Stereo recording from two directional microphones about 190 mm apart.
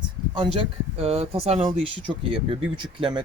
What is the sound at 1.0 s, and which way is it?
Speech, 30° right (ahead or behind).